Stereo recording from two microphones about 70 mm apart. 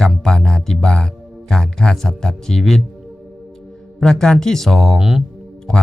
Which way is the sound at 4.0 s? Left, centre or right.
Centre.